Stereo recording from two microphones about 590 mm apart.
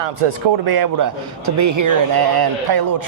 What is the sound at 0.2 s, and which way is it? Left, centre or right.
Speech, right.